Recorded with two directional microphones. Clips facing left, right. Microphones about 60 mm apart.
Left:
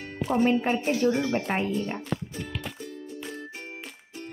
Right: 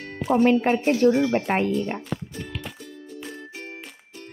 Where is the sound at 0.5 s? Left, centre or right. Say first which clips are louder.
Right 5 dB; right.